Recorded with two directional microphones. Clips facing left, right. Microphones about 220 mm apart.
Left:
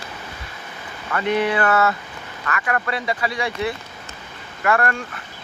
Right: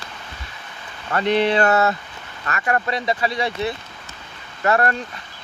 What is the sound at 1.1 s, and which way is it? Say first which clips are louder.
Speech: right 2 dB; 30° right (ahead or behind).